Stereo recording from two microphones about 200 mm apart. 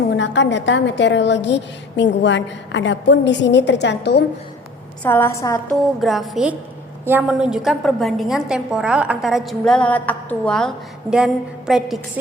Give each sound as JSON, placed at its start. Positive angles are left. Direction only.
{"t": 0.2, "sound": "a woman's voice", "side_deg": 65}
{"t": 5.0, "sound": "a woman's voice", "side_deg": 10}
{"t": 5.8, "sound": "a woman's voice", "side_deg": 0}